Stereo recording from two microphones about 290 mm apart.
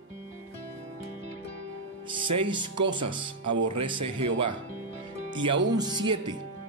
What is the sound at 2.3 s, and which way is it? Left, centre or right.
Speech, centre.